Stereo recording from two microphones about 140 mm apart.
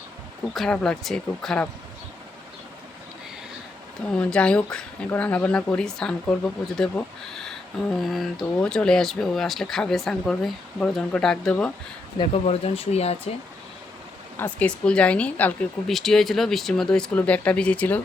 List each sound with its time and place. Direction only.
0.5 s speech: 5° left (ahead or behind)
4.1 s speech: 5° left (ahead or behind)
12.1 s speech: 40° left (ahead or behind)
14.3 s speech: 10° left (ahead or behind)